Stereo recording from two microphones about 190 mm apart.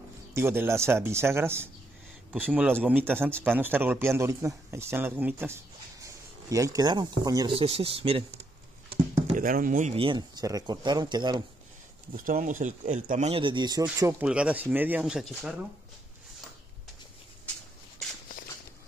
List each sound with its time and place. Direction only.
0.3 s speech: 10° right (ahead or behind); by 8.2 s 30° right (ahead or behind)
9.4 s speech: 45° right (ahead or behind); by 11.4 s 20° right (ahead or behind)
12.3 s speech: 45° right (ahead or behind); by 13.8 s 20° right (ahead or behind)
14.2 s speech: 5° right (ahead or behind)